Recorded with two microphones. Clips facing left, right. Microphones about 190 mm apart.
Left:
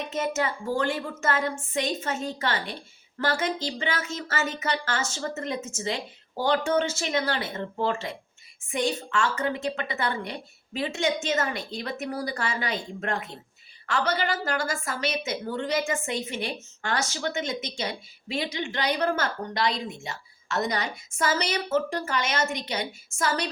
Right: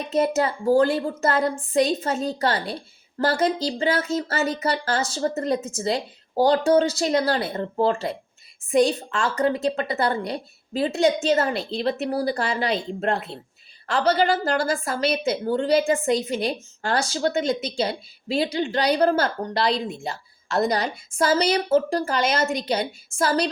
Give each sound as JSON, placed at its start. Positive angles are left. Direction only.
{"t": 0.0, "sound": "a woman's voice", "side_deg": -35}